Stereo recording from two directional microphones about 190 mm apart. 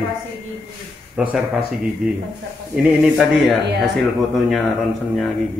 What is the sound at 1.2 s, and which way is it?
Speech, 5° right (ahead or behind).